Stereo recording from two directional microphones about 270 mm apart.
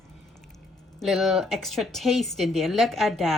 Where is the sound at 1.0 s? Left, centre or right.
Centre.